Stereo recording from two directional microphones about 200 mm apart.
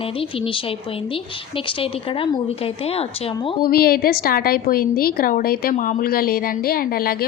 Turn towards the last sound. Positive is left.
turn(degrees=45)  # may be behind; listen again after turning